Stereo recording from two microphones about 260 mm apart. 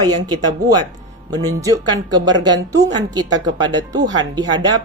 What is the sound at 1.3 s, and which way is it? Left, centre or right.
A woman's voice, centre.